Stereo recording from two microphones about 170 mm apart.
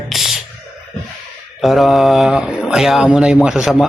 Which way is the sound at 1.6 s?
Centre (ahead or behind).